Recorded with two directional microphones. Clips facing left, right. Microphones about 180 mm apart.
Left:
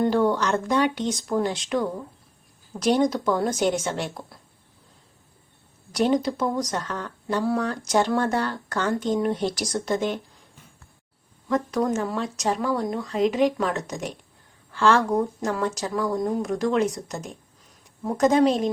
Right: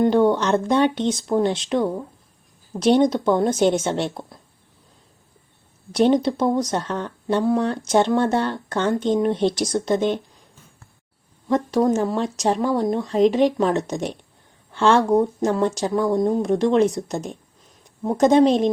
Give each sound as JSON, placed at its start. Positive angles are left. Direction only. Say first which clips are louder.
{"t": 0.0, "sound": "speech", "louder": "right 4 dB", "side_deg": -20}
{"t": 5.9, "sound": "speech", "louder": "right 5 dB", "side_deg": -25}
{"t": 11.4, "sound": "speech", "louder": "right 5 dB", "side_deg": -30}